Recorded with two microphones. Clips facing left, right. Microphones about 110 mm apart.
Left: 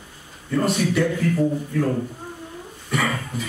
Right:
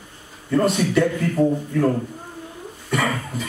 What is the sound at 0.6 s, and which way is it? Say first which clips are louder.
Speech: right 2 dB; centre (ahead or behind).